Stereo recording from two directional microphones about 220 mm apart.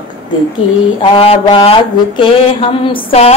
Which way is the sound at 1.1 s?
25° left (ahead or behind).